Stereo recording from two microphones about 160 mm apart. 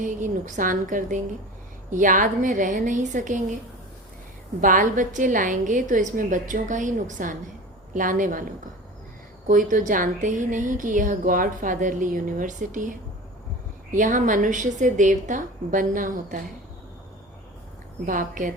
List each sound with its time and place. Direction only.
0.0 s a woman's voice: 55° right (ahead or behind)
4.6 s a woman's voice: 55° right (ahead or behind)
9.5 s a woman's voice: 55° right (ahead or behind)
18.0 s a woman's voice: 55° right (ahead or behind)